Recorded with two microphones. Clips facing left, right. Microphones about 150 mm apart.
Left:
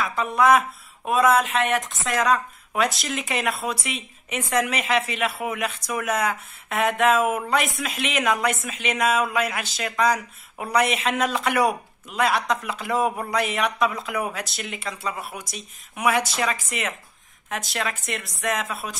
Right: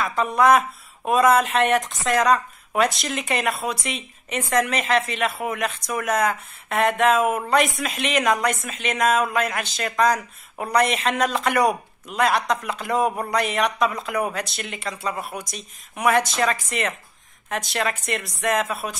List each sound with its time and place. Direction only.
0.0 s speech: centre (ahead or behind)